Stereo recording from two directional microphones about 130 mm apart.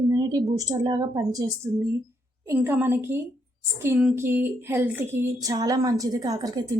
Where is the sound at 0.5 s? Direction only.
30° right (ahead or behind).